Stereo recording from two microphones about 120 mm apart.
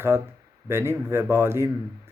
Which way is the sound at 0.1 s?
20° right (ahead or behind).